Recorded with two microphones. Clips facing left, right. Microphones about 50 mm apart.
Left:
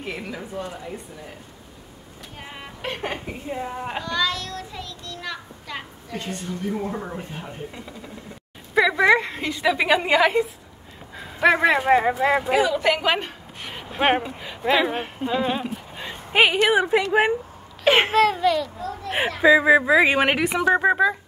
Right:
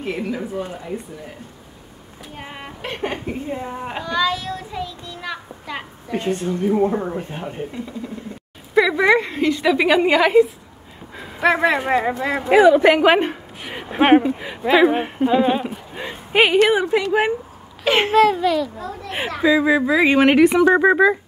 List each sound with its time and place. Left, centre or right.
0.0 s speech: centre
2.3 s speech: centre
2.8 s a woman's voice: centre
4.0 s child singing: centre
6.1 s a woman's voice: right
8.7 s a woman's voice: centre
12.5 s a woman's voice: right
13.6 s a sound: centre
14.0 s speech: centre
16.6 s speech: centre
18.1 s a woman's voice: centre
19.0 s speech: centre